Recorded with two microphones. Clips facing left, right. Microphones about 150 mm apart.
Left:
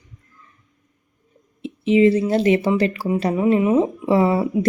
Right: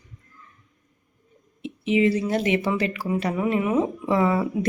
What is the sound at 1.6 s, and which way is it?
A woman's voice, 30° left (ahead or behind).